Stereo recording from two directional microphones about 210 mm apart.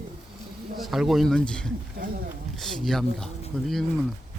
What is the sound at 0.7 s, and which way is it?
Speech, centre (ahead or behind).